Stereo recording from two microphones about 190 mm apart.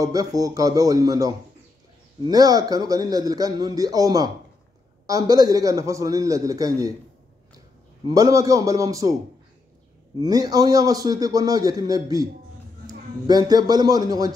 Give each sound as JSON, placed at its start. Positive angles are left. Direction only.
{"t": 0.0, "sound": "a man's voice", "side_deg": -20}
{"t": 5.3, "sound": "a man's voice", "side_deg": -20}
{"t": 8.1, "sound": "a man's voice", "side_deg": -15}
{"t": 10.2, "sound": "a man's voice", "side_deg": -20}
{"t": 13.3, "sound": "a man's voice", "side_deg": -20}